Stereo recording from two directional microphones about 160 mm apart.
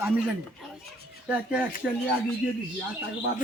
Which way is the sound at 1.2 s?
10° right (ahead or behind).